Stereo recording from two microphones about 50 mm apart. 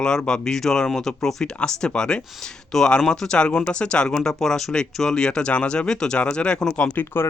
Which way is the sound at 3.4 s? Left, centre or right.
Left.